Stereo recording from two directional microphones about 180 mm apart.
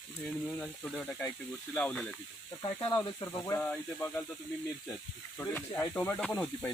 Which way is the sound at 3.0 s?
20° left (ahead or behind).